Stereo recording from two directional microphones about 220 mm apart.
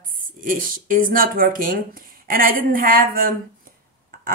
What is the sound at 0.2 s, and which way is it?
Speech, 40° right (ahead or behind).